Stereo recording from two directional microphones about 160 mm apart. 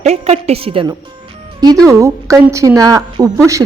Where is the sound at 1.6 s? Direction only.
20° right (ahead or behind).